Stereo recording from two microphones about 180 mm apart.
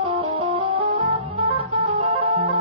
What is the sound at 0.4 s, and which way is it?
Music, 30° right (ahead or behind).